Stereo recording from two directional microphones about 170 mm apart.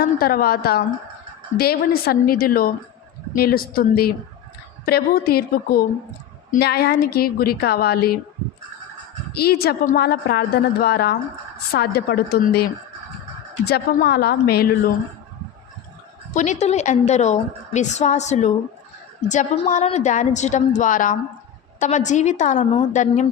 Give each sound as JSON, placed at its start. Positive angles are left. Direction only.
{"t": 0.0, "sound": "a woman's voice", "side_deg": 60}
{"t": 9.3, "sound": "a woman's voice", "side_deg": 65}
{"t": 16.3, "sound": "a woman's voice", "side_deg": 45}